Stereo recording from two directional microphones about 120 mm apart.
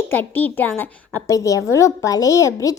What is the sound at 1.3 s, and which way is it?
A woman's voice, 25° left (ahead or behind).